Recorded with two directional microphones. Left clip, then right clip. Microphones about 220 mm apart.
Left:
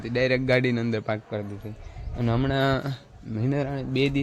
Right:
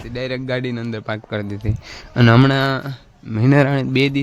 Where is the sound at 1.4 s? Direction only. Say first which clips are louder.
Right 7 dB; 30° right (ahead or behind).